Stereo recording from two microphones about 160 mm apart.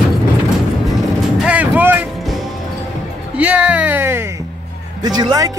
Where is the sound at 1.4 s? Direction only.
10° right (ahead or behind).